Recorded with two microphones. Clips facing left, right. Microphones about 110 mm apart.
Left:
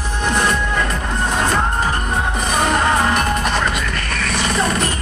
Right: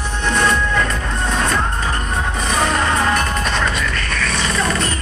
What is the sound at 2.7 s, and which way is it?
Music, 20° left (ahead or behind).